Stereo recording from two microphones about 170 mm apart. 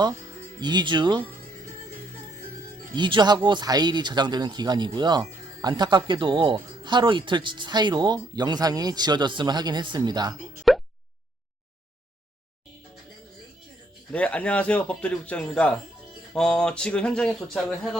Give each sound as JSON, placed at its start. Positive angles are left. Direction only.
{"t": 0.6, "sound": "speech", "side_deg": -25}
{"t": 2.9, "sound": "speech", "side_deg": -25}
{"t": 10.7, "sound": "a sound", "side_deg": 0}
{"t": 14.1, "sound": "a man's voice", "side_deg": 5}